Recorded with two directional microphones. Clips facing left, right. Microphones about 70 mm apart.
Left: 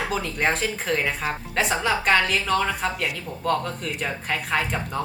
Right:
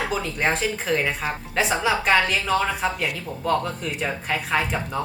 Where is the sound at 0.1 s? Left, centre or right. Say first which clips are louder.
Even; centre.